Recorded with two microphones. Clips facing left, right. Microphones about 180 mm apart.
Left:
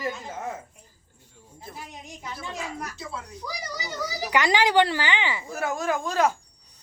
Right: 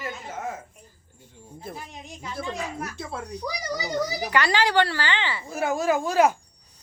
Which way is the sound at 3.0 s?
55° right (ahead or behind).